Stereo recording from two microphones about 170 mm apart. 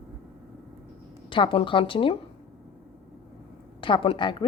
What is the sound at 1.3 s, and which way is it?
Speech, 30° left (ahead or behind).